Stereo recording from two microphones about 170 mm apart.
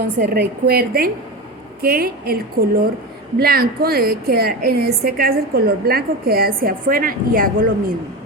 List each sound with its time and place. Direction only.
0.2 s a woman's voice: 60° right (ahead or behind)